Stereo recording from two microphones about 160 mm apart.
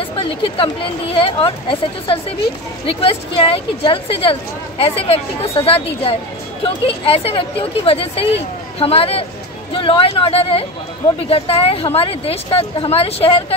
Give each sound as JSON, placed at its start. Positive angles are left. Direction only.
{"t": 0.0, "sound": "speech", "side_deg": 35}